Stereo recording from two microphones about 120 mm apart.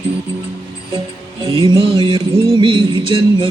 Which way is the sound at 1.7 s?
45° right (ahead or behind).